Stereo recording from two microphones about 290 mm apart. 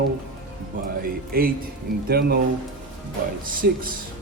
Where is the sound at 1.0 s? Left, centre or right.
Right.